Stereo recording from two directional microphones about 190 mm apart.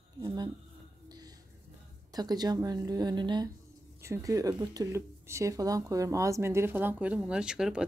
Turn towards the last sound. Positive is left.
turn(degrees=-5)  # may be behind; listen again after turning